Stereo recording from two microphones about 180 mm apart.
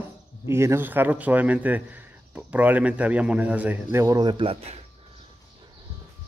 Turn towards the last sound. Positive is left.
turn(degrees=-35)  # may be behind; listen again after turning